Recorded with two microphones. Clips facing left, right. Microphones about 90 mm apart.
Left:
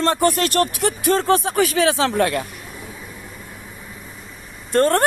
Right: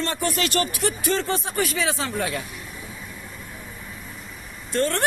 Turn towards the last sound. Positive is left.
turn(degrees=45)  # may be behind; listen again after turning